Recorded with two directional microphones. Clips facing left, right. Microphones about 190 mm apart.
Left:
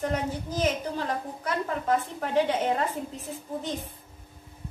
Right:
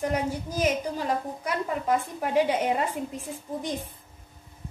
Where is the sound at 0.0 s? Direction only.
10° right (ahead or behind).